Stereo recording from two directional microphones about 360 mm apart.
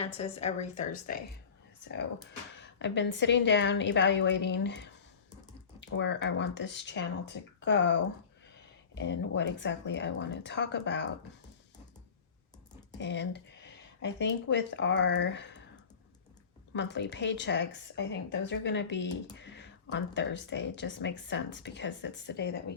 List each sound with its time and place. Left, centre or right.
0.0 s a woman's voice: centre
2.6 s speech: left
13.0 s speech: left
16.7 s speech: left